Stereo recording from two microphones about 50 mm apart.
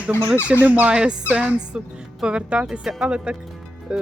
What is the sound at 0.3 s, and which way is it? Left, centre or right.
Speech, left.